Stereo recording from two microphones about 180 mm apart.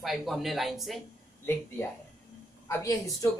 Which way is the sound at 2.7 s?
20° left (ahead or behind).